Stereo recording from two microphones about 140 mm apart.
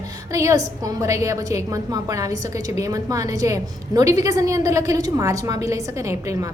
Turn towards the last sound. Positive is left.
turn(degrees=-20)  # may be behind; listen again after turning